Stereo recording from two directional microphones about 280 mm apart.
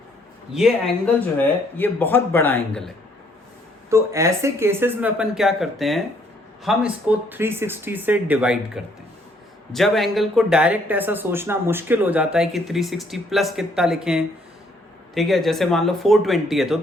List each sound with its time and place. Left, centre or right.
0.5 s speech: centre
3.8 s speech: centre